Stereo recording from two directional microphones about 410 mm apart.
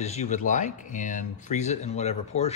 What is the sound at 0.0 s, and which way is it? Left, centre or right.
Speech, centre.